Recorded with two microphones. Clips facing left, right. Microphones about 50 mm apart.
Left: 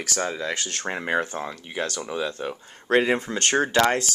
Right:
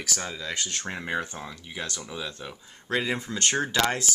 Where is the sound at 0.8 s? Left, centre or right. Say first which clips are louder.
Left 7 dB; left.